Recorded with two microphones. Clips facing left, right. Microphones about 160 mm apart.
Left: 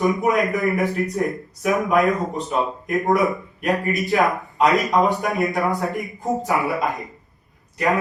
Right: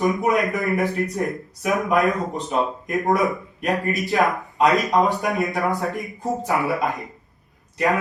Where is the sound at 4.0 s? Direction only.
Centre (ahead or behind).